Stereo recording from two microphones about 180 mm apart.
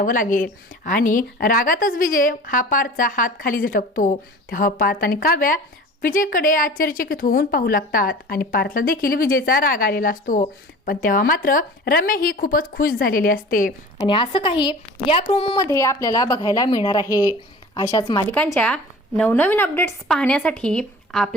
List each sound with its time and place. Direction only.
0.0 s a woman's voice: 45° left (ahead or behind)
14.1 s a woman's voice: 30° left (ahead or behind)
15.6 s a woman's voice: 15° left (ahead or behind)
18.3 s speech: 5° left (ahead or behind)